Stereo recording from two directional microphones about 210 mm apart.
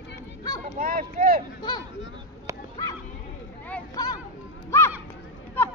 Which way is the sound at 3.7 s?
15° left (ahead or behind).